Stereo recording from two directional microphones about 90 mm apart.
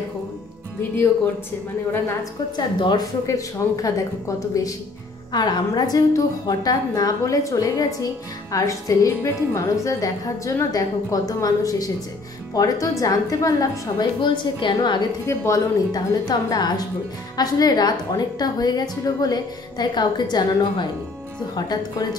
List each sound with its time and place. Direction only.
2.5 s a woman's voice: 55° left (ahead or behind)
3.3 s a woman's voice: 40° left (ahead or behind)
5.3 s a woman's voice: 50° left (ahead or behind)
14.2 s a woman's voice: 60° left (ahead or behind)
15.2 s a woman's voice: 35° left (ahead or behind)
15.9 s a woman's voice: 45° left (ahead or behind)